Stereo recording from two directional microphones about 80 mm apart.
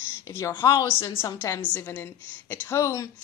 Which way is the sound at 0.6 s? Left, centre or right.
Left.